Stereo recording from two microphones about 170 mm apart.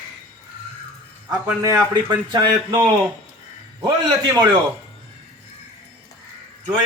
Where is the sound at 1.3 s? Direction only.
20° right (ahead or behind).